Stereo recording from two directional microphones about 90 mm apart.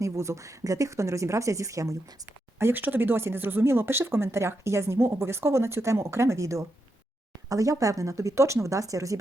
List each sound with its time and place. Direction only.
0.0 s speech: 35° right (ahead or behind)
2.6 s speech: 25° right (ahead or behind)